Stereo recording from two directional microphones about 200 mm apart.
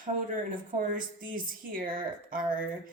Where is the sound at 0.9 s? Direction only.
45° right (ahead or behind).